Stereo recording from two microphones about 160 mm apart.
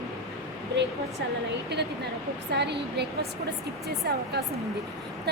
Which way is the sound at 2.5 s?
90° right.